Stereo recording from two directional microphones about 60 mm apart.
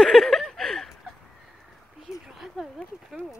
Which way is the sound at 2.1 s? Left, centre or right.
Centre.